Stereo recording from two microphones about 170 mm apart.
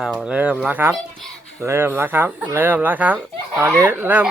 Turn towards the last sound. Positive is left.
turn(degrees=-10)  # may be behind; listen again after turning